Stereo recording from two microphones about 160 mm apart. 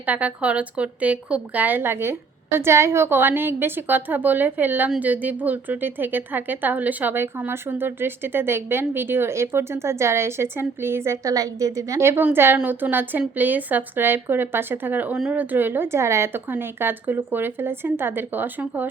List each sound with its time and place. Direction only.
0.0 s a woman's voice: 10° right (ahead or behind)